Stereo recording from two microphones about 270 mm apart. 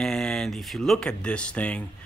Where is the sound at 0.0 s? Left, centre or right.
Centre.